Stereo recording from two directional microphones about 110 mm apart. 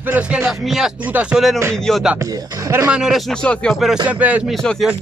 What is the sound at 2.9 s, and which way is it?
Speech, 5° right (ahead or behind).